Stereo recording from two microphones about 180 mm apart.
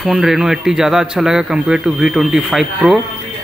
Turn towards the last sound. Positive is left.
turn(degrees=0)  # may be behind; listen again after turning